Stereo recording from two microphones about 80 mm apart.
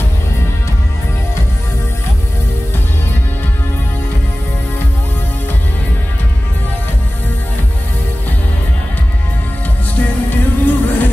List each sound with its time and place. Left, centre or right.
9.9 s music: left